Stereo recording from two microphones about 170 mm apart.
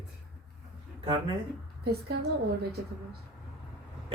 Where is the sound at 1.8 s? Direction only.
70° right (ahead or behind).